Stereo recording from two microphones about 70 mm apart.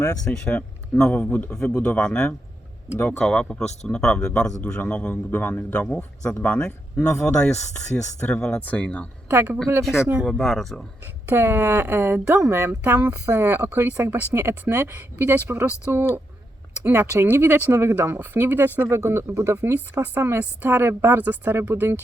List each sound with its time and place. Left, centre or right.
0.3 s a man's voice: centre
5.8 s speech: centre
9.3 s speech: right
10.2 s speech: centre
11.0 s speech: right
19.9 s speech: right